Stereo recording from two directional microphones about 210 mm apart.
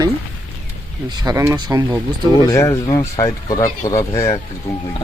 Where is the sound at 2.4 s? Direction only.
15° left (ahead or behind).